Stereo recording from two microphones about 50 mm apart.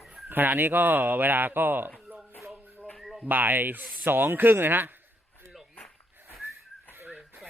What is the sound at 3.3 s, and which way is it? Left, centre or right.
Speech, right.